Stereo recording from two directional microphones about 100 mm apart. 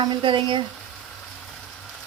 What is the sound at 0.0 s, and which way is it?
Speech, 50° right (ahead or behind).